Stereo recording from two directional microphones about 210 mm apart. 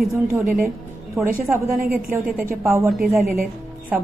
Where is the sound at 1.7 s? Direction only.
45° right (ahead or behind).